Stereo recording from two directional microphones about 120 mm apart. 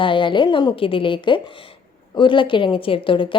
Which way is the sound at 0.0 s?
45° left (ahead or behind).